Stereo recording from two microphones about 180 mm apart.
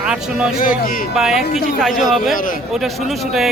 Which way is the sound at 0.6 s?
50° left (ahead or behind).